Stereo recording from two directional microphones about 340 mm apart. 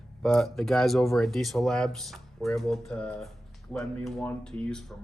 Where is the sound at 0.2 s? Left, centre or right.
Centre.